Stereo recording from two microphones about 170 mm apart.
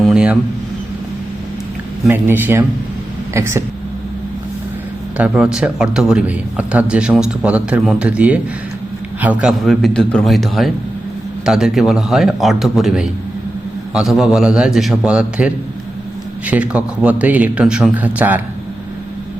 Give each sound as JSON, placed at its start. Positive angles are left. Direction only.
{"t": 0.0, "sound": "a sound", "side_deg": -5}
{"t": 2.0, "sound": "speech", "side_deg": -10}
{"t": 5.1, "sound": "a man's voice", "side_deg": -5}